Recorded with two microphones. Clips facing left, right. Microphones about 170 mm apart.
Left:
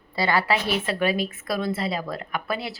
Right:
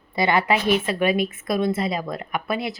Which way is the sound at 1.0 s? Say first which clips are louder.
Right 3 dB; 35° left (ahead or behind).